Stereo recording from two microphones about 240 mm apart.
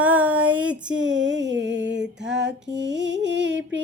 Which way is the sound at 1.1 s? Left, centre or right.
Right.